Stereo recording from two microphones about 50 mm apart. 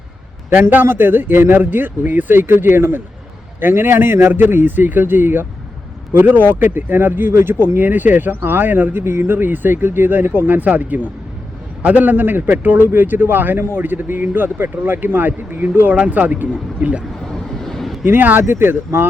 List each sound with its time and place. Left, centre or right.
0.7 s a man's voice: right
17.6 s a sound: centre
18.0 s a man's voice: right
18.4 s speech: right